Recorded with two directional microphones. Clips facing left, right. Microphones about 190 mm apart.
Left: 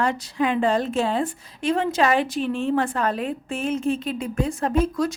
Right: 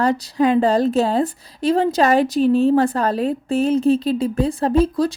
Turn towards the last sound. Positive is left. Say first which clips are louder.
# right 5 dB
turn(degrees=-30)  # may be behind; listen again after turning